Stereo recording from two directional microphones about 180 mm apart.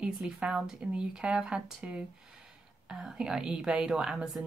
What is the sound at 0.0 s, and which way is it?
A woman's voice, 5° right (ahead or behind).